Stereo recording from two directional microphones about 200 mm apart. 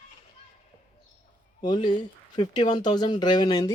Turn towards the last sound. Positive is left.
turn(degrees=20)  # may be behind; listen again after turning